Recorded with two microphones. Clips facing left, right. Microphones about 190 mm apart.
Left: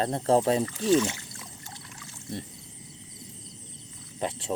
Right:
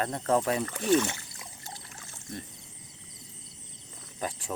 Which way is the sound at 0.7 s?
60° right (ahead or behind).